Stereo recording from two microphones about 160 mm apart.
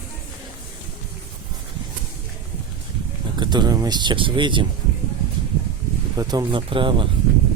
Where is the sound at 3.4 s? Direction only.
25° right (ahead or behind).